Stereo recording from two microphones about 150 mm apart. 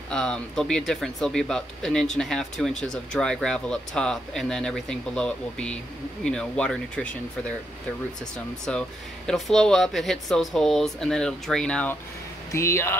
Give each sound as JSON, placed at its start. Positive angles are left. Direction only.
{"t": 0.1, "sound": "speech", "side_deg": 5}
{"t": 8.6, "sound": "speech", "side_deg": 5}